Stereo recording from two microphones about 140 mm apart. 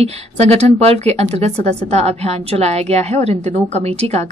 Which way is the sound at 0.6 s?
50° right (ahead or behind).